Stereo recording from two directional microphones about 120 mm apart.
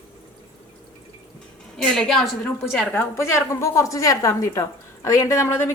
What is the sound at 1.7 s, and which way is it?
Speech, 5° left (ahead or behind).